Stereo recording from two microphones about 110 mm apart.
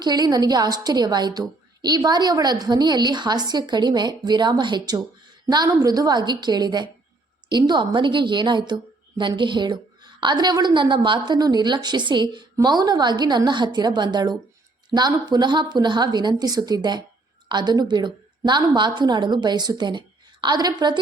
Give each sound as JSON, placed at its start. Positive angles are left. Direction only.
{"t": 0.0, "sound": "a woman's voice", "side_deg": -40}